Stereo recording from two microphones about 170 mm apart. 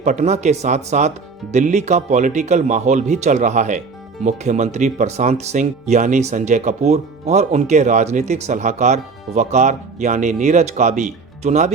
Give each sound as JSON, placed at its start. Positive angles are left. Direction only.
{"t": 0.0, "sound": "speech", "side_deg": -40}